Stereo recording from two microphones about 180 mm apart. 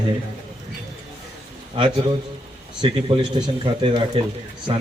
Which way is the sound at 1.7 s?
30° right (ahead or behind).